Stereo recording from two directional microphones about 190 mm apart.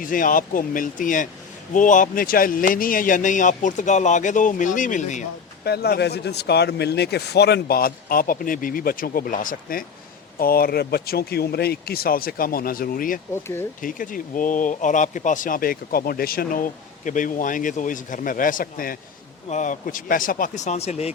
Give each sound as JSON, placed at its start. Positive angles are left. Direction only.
{"t": 0.0, "sound": "speech", "side_deg": 45}
{"t": 5.6, "sound": "speech", "side_deg": 60}
{"t": 13.3, "sound": "speech", "side_deg": 10}
{"t": 13.8, "sound": "speech", "side_deg": 45}